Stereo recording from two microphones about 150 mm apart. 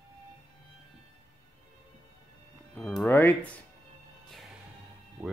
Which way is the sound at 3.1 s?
20° left (ahead or behind).